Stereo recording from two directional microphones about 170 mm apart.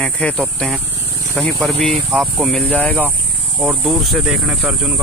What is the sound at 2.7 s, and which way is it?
Speech, 10° left (ahead or behind).